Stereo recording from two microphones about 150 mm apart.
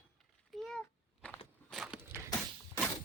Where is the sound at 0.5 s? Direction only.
Centre (ahead or behind).